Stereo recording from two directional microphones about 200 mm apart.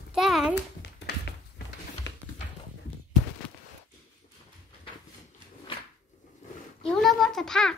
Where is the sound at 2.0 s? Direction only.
65° left (ahead or behind).